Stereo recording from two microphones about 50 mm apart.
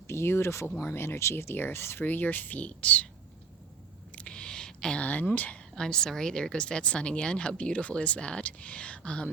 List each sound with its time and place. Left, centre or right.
0.1 s speech: left
4.1 s a sound: left
5.0 s speech: left
5.7 s a woman's voice: centre